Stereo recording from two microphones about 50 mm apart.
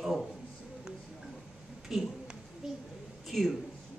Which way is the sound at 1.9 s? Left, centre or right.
Centre.